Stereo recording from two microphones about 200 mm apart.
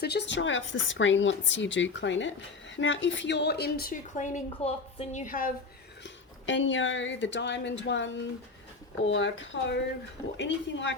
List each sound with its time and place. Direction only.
0.0 s a woman's voice: 55° left (ahead or behind); by 5.5 s 40° left (ahead or behind)
6.0 s speech: 65° left (ahead or behind)